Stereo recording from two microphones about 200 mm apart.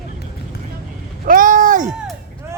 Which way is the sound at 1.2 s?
45° right (ahead or behind).